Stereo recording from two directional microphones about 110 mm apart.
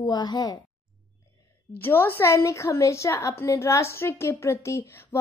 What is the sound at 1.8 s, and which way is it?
A woman's voice, 20° left (ahead or behind).